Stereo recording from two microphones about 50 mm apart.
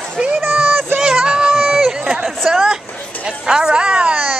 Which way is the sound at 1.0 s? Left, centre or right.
Centre.